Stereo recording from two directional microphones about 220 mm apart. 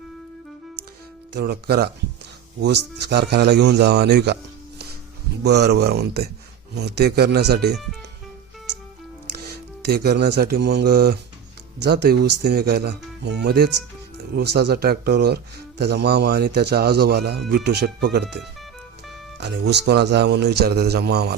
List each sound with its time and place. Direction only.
1.3 s a man's voice: 45° right (ahead or behind)
5.4 s a man's voice: 50° right (ahead or behind)
9.2 s a man's voice: 45° right (ahead or behind)
19.4 s a man's voice: 50° right (ahead or behind)